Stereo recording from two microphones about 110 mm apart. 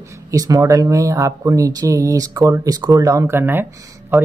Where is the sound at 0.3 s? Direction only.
30° right (ahead or behind).